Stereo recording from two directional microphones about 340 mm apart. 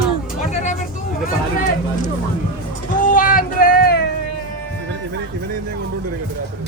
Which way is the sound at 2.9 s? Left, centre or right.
Left.